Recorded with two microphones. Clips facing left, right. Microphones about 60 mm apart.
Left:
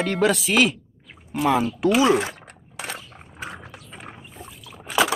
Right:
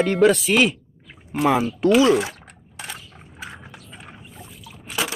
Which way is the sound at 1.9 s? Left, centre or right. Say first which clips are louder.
Right 2 dB; left.